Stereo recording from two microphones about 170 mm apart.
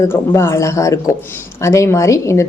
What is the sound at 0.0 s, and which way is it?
A woman's voice, 15° left (ahead or behind).